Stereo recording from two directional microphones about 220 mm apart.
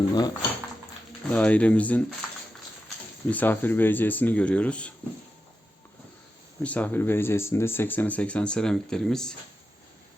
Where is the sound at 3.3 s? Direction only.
10° left (ahead or behind).